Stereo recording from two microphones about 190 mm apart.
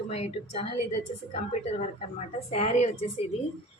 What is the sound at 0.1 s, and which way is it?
A woman's voice, 35° left (ahead or behind).